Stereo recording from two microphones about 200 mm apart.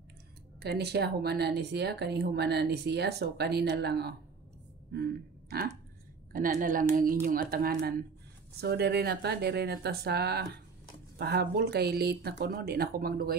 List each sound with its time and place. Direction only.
0.6 s speech: 55° right (ahead or behind)
4.9 s a sound: 50° right (ahead or behind)
6.3 s speech: 45° right (ahead or behind)